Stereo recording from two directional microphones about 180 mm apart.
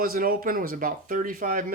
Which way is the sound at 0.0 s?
55° right (ahead or behind).